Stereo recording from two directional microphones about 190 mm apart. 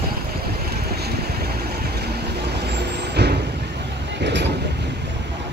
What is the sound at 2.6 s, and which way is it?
Vehicle, 60° right (ahead or behind).